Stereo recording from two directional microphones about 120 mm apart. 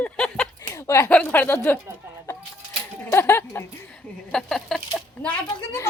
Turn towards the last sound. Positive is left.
turn(degrees=25)  # may be behind; listen again after turning